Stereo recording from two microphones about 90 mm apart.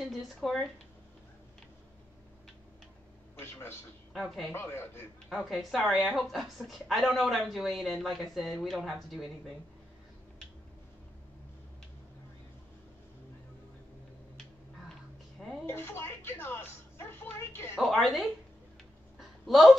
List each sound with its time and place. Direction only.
0.0 s a woman's voice: centre (ahead or behind)
3.3 s a man's voice: 25° left (ahead or behind)
4.1 s speech: centre (ahead or behind)
4.5 s a man's voice: 25° left (ahead or behind)
5.3 s a woman's voice: centre (ahead or behind)
15.6 s speech: 25° left (ahead or behind)
17.7 s a woman's voice: centre (ahead or behind)
19.1 s a sound: centre (ahead or behind)